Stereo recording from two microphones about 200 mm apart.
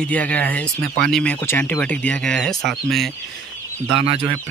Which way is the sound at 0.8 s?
50° right (ahead or behind).